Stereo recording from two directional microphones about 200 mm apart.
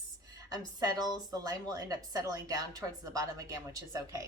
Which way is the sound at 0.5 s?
20° right (ahead or behind).